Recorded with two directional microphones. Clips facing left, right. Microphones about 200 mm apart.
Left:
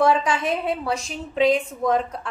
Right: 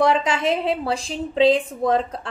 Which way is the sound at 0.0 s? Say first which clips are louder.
Right 1 dB; 25° right (ahead or behind).